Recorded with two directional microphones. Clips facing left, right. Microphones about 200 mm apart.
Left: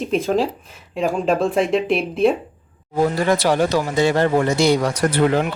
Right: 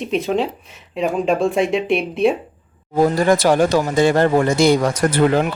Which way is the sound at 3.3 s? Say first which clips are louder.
Right 3 dB; 45° right (ahead or behind).